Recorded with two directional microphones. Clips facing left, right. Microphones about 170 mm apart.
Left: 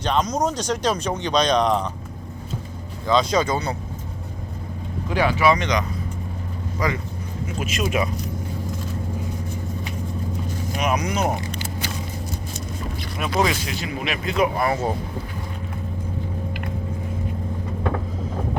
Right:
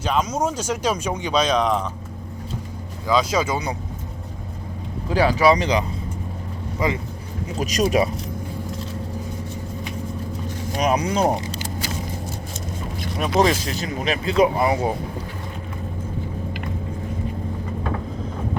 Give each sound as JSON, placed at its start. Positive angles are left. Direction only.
{"t": 0.0, "sound": "speech", "side_deg": -5}
{"t": 3.1, "sound": "speech", "side_deg": -5}
{"t": 5.0, "sound": "speech", "side_deg": -35}
{"t": 7.4, "sound": "speech", "side_deg": -40}
{"t": 10.8, "sound": "speech", "side_deg": -35}
{"t": 13.3, "sound": "speech", "side_deg": -35}
{"t": 14.6, "sound": "speech", "side_deg": -15}